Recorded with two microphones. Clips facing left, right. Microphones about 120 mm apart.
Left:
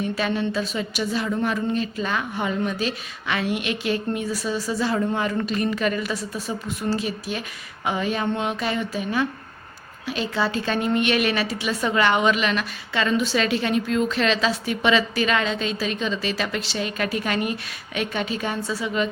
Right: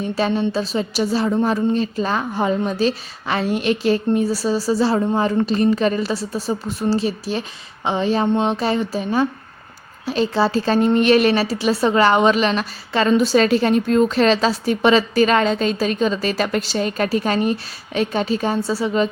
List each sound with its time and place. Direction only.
0.0 s a woman's voice: 30° right (ahead or behind)